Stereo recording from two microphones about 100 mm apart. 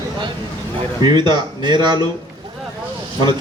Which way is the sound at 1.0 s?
45° right (ahead or behind).